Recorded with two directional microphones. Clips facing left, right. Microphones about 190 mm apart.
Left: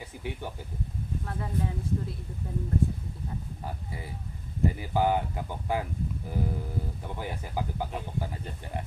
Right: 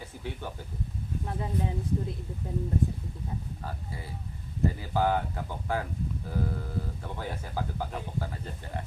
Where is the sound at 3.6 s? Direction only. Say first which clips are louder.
Left 1 dB; 15° left (ahead or behind).